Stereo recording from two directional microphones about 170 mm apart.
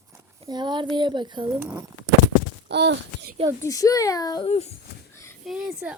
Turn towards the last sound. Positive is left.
turn(degrees=-5)  # may be behind; listen again after turning